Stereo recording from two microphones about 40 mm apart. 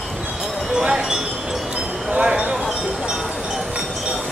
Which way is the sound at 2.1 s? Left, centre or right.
Right.